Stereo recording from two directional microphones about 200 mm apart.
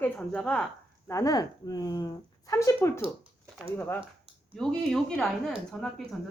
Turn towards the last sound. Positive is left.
turn(degrees=0)  # may be behind; listen again after turning